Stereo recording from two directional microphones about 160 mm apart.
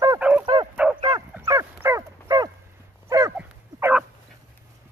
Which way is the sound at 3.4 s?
10° right (ahead or behind).